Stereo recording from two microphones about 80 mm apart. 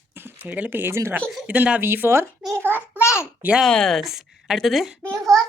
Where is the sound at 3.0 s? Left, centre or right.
Left.